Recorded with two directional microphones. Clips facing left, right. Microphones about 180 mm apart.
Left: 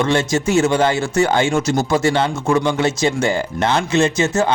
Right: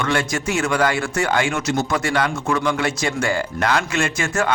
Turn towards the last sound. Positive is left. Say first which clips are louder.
# left 5 dB
turn(degrees=20)  # may be behind; listen again after turning